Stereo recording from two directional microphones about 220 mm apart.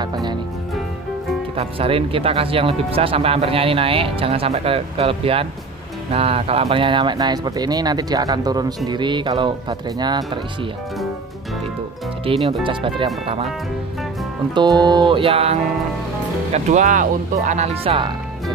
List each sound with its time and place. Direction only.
0.0 s music: 20° right (ahead or behind)
1.6 s speech: 25° right (ahead or behind)
12.3 s speech: 25° right (ahead or behind)
14.5 s speech: 20° right (ahead or behind)
16.5 s speech: 35° right (ahead or behind)